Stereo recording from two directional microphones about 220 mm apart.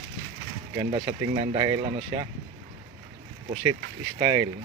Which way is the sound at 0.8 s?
20° right (ahead or behind).